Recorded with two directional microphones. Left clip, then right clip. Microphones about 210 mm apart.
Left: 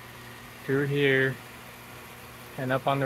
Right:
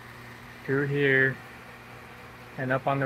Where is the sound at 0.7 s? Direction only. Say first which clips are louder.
Even; 15° left (ahead or behind).